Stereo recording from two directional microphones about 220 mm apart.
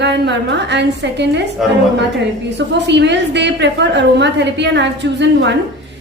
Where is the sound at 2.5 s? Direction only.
50° right (ahead or behind).